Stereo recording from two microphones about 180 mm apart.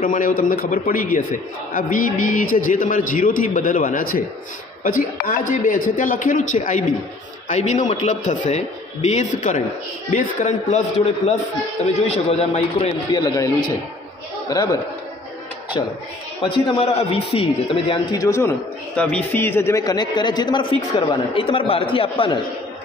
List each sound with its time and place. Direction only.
0.0 s a man's voice: 50° left (ahead or behind)
12.1 s speech: 35° left (ahead or behind)
13.2 s a man's voice: 20° left (ahead or behind)
16.4 s speech: 30° left (ahead or behind)
18.1 s a man's voice: 15° left (ahead or behind)
18.9 s a man's voice: 5° left (ahead or behind); by 22.4 s 30° left (ahead or behind)